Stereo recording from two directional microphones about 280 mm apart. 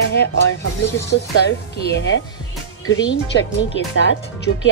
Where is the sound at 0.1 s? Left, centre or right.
Left.